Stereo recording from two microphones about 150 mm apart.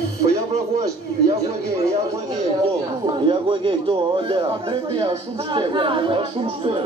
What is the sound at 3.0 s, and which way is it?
Speech, 30° right (ahead or behind).